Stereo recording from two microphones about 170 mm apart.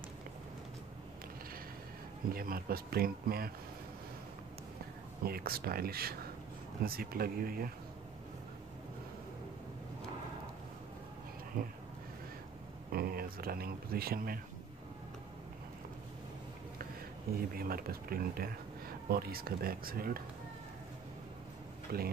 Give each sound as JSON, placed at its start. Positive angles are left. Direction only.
{"t": 2.2, "sound": "speech", "side_deg": -60}
{"t": 5.2, "sound": "speech", "side_deg": -65}
{"t": 12.9, "sound": "speech", "side_deg": -60}
{"t": 17.4, "sound": "speech", "side_deg": -60}
{"t": 21.9, "sound": "speech", "side_deg": -65}